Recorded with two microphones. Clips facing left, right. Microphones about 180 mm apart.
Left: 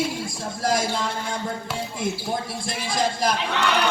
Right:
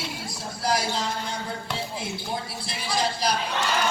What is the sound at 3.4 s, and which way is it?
Speech, 70° left (ahead or behind).